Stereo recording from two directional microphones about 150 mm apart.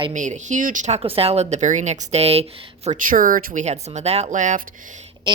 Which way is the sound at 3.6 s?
50° right (ahead or behind).